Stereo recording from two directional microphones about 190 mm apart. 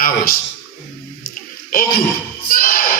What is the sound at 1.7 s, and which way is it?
Speech, 50° left (ahead or behind).